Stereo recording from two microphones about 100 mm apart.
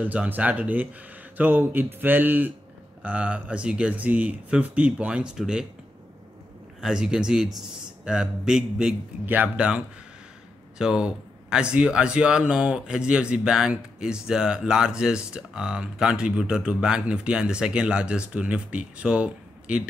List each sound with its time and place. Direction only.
0.0 s speech: 15° right (ahead or behind)
1.3 s a sound: 15° right (ahead or behind)
3.0 s speech: 10° right (ahead or behind)
6.8 s speech: 5° right (ahead or behind)
9.2 s speech: 15° right (ahead or behind)
10.8 s speech: 5° right (ahead or behind)